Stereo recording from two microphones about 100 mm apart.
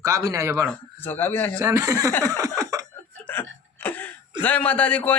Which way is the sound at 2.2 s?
35° right (ahead or behind).